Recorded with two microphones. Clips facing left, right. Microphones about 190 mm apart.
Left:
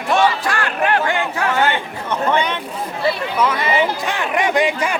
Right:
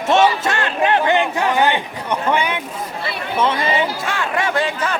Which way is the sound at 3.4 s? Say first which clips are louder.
Right 5 dB; 30° right (ahead or behind).